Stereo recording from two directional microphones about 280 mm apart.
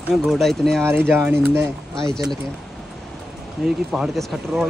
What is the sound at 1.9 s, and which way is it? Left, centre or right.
Speech, centre.